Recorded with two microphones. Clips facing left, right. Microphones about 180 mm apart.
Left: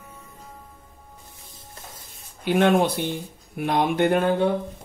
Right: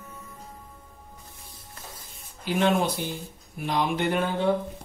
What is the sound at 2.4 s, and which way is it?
Speech, 65° left (ahead or behind).